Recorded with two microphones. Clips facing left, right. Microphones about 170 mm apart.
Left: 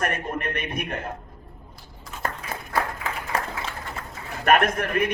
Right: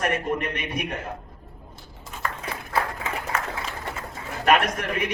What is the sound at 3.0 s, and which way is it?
Run, 35° left (ahead or behind).